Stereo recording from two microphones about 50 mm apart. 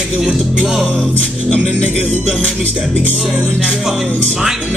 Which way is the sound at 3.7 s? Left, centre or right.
Centre.